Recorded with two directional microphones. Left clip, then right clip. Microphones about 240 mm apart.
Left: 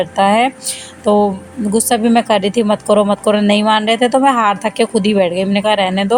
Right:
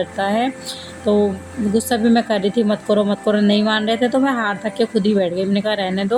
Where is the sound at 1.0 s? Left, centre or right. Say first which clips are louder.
Left 5 dB; left.